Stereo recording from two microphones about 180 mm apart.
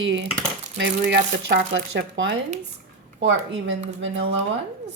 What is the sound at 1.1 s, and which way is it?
Speech, 70° right (ahead or behind).